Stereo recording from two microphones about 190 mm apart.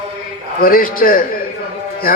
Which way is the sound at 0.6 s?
50° left (ahead or behind).